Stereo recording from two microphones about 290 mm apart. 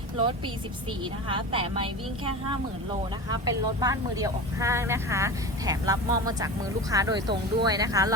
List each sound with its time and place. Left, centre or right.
1.3 s speech: centre
3.2 s speech: centre